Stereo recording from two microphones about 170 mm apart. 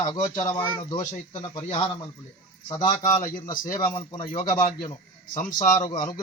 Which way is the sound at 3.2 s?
50° left (ahead or behind).